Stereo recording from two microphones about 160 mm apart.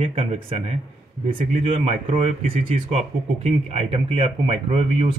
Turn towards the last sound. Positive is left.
turn(degrees=-35)  # may be behind; listen again after turning